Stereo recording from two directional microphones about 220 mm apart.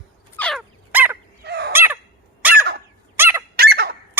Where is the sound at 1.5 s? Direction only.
50° right (ahead or behind).